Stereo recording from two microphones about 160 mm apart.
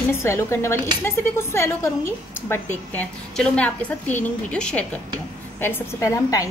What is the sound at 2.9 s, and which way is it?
A woman's voice, 5° left (ahead or behind).